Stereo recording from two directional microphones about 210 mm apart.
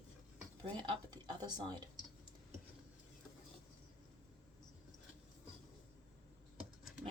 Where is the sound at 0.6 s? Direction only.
20° right (ahead or behind).